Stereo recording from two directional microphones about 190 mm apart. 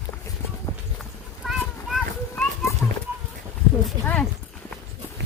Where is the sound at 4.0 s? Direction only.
10° left (ahead or behind).